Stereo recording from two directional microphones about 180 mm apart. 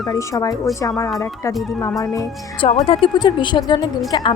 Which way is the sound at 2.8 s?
30° left (ahead or behind).